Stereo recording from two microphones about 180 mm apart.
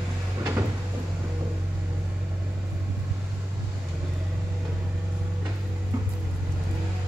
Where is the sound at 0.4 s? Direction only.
15° right (ahead or behind).